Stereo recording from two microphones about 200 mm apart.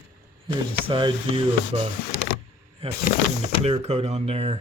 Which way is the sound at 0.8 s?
25° right (ahead or behind).